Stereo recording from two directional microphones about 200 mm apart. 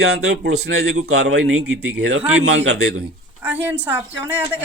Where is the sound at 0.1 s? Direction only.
90° right.